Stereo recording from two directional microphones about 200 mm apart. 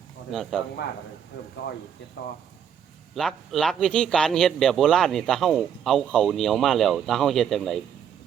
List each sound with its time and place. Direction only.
0.3 s speech: centre (ahead or behind)
2.2 s speech: 60° left (ahead or behind)
3.2 s speech: centre (ahead or behind)